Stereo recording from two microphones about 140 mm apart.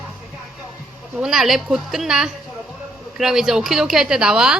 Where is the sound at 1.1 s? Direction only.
5° right (ahead or behind).